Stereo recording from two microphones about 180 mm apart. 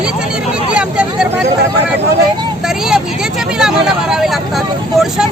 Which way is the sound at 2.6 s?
Centre (ahead or behind).